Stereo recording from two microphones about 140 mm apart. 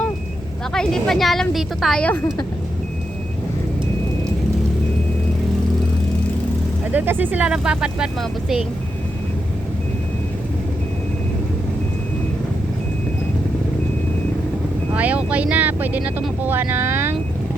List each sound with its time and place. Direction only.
0.7 s a woman's voice: 5° left (ahead or behind)
6.9 s speech: 15° right (ahead or behind)
14.9 s speech: 10° right (ahead or behind)